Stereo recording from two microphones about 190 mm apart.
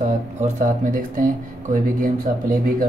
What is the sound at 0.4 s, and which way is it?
Speech, 40° right (ahead or behind).